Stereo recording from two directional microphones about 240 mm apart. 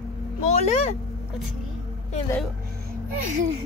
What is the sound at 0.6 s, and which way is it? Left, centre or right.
Speech, left.